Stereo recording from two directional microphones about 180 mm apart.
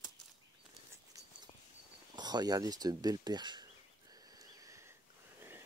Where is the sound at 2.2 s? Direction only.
20° right (ahead or behind).